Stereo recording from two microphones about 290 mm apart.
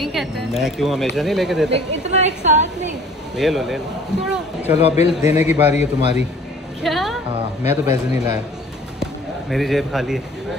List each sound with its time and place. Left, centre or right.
0.0 s speech: centre
2.0 s a woman's voice: right
3.3 s speech: centre
4.7 s a man's voice: left
6.8 s music: centre
7.6 s a man's voice: centre
9.0 s speech: centre